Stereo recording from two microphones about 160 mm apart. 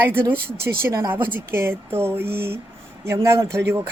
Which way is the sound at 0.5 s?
75° right (ahead or behind).